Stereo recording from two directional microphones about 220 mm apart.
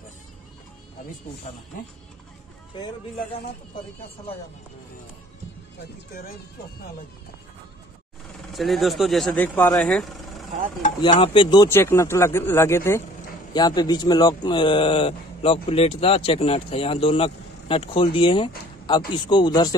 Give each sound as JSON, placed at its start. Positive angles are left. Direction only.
{"t": 2.7, "sound": "speech", "side_deg": 20}
{"t": 8.5, "sound": "speech", "side_deg": 0}
{"t": 11.0, "sound": "speech", "side_deg": 25}